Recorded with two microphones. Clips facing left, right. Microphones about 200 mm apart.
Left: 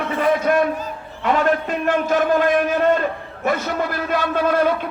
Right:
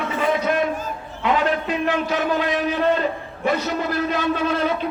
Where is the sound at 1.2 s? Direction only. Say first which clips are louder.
Left 2 dB; 45° left (ahead or behind).